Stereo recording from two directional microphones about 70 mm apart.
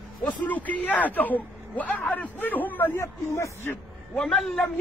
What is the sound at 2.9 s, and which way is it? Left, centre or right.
Speech, left.